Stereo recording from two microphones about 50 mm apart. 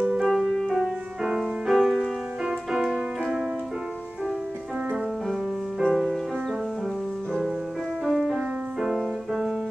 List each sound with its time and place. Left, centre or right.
0.0 s music: right
0.3 s music: centre
0.7 s music: centre
2.0 s music: centre
5.9 s music: centre
8.0 s music: centre